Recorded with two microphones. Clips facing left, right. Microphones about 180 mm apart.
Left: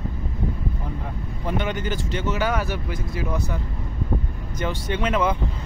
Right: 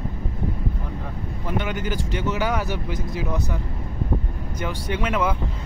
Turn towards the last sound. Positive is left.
turn(degrees=-10)  # may be behind; listen again after turning